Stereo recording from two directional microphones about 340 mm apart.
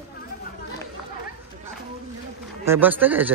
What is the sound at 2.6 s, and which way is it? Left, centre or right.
Speech, centre.